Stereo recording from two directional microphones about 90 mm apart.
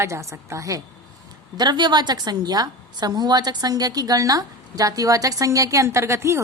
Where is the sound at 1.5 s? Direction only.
55° right (ahead or behind).